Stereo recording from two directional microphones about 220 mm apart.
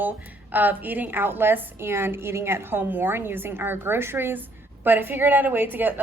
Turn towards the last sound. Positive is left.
turn(degrees=-10)  # may be behind; listen again after turning